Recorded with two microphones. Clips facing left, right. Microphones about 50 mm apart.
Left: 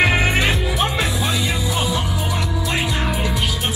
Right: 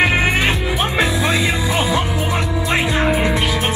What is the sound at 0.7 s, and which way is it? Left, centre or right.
Music, right.